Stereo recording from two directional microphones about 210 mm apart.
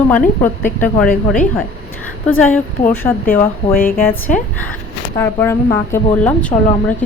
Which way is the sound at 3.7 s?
45° left (ahead or behind).